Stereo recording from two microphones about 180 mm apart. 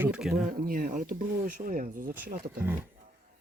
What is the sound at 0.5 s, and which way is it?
Speech, 50° right (ahead or behind).